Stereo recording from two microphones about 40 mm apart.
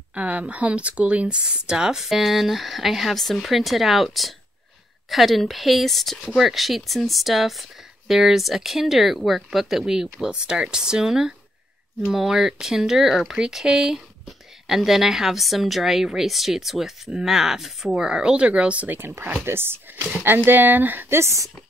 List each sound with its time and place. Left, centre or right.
0.1 s speech: right
1.4 s speech: centre
2.0 s a woman's voice: centre
13.9 s a woman's voice: centre
17.9 s speech: centre
18.9 s speech: right
20.2 s speech: right